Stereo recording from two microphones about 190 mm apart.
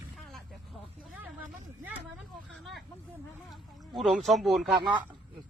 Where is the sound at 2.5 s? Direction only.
Centre (ahead or behind).